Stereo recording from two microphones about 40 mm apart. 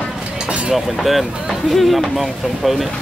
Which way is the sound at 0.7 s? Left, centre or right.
Centre.